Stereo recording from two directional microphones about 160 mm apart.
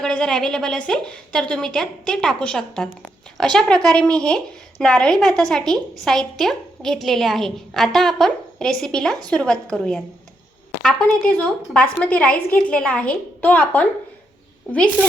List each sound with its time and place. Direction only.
0.0 s a woman's voice: 5° left (ahead or behind)
11.2 s a woman's voice: 10° left (ahead or behind)